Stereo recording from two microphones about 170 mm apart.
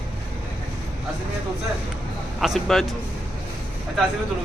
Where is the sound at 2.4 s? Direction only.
Centre (ahead or behind).